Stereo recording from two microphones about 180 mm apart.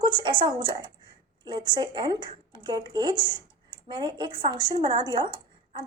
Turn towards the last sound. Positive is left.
turn(degrees=-25)  # may be behind; listen again after turning